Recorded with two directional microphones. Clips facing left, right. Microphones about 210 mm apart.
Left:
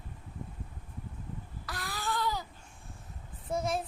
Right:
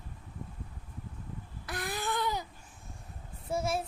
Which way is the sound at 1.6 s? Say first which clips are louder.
Right 3 dB; 20° right (ahead or behind).